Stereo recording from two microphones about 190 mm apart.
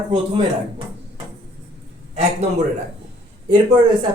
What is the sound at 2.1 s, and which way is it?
Speech, 35° right (ahead or behind).